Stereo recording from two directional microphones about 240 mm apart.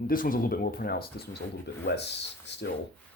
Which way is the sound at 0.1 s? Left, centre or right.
Left.